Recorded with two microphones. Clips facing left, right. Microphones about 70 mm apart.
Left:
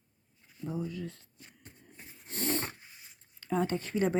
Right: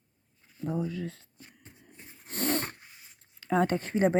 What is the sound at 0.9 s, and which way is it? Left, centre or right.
Speech, right.